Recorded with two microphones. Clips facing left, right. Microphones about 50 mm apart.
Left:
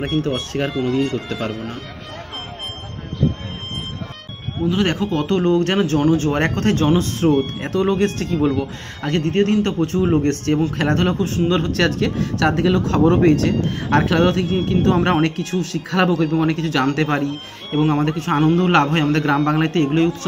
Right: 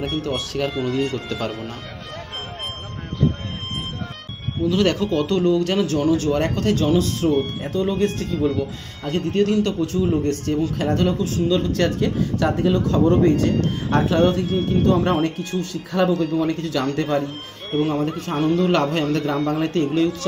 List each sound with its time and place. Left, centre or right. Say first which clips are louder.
0.7 s speech: left 3 dB; centre
1.1 s speech: left 2 dB; centre
4.6 s speech: even; left
7.6 s speech: left 3 dB; left
9.4 s speech: left 1 dB; left
10.1 s speech: left 3 dB; left
16.3 s speech: left 3 dB; left
18.5 s speech: left 1 dB; left
19.3 s speech: left 3 dB; left